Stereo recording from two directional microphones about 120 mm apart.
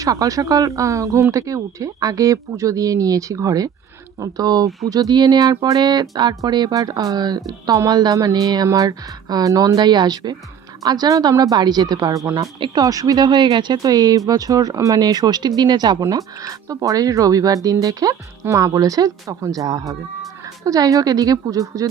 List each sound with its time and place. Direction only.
0.0 s speech: 30° right (ahead or behind)
12.5 s speech: 45° right (ahead or behind)
12.8 s speech: 30° right (ahead or behind)